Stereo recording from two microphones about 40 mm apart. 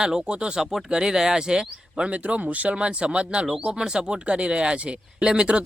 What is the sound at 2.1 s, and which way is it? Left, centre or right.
Speech, right.